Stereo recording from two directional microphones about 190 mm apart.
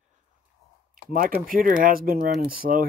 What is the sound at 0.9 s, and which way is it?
Speech, 50° right (ahead or behind).